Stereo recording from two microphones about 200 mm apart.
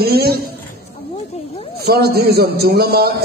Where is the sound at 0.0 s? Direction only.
50° right (ahead or behind).